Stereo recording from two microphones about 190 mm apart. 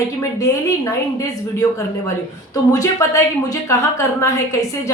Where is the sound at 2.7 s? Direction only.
15° left (ahead or behind).